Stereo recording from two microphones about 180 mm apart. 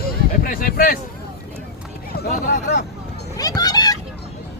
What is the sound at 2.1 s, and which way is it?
Speech, 55° left (ahead or behind).